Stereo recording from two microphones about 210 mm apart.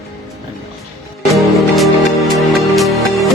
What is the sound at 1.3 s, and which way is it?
Music, centre (ahead or behind).